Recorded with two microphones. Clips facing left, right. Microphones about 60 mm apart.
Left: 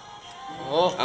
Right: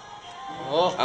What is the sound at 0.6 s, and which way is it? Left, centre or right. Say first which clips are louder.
Speech: even; centre.